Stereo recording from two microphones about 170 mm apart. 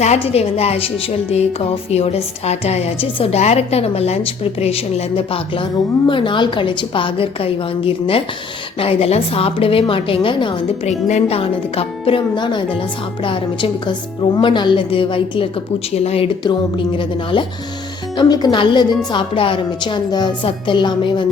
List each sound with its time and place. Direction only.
0.0 s a woman's voice: 40° left (ahead or behind)
1.9 s a woman's voice: 40° left (ahead or behind)